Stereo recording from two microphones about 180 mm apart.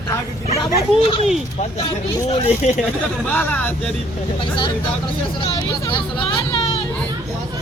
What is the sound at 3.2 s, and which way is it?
Speech, 10° left (ahead or behind).